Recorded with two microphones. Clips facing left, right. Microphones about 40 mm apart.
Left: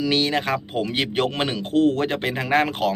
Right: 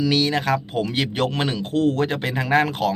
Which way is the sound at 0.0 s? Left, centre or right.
Left.